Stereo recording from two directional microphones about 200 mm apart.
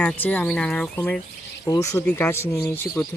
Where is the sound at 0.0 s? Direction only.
5° left (ahead or behind).